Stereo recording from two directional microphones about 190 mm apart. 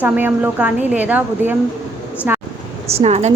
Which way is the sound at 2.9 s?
35° right (ahead or behind).